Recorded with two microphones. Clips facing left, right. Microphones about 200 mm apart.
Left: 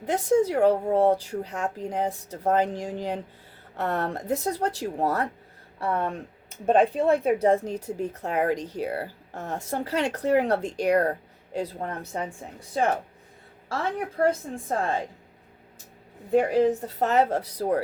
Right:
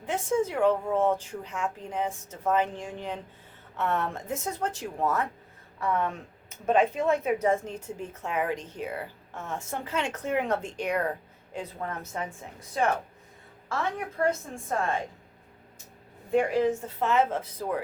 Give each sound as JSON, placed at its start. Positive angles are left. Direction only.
{"t": 0.0, "sound": "speech", "side_deg": 40}
{"t": 14.2, "sound": "speech", "side_deg": 30}
{"t": 16.3, "sound": "speech", "side_deg": 35}